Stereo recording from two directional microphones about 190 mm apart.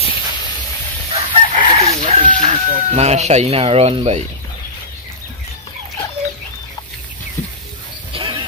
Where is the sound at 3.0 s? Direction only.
35° right (ahead or behind).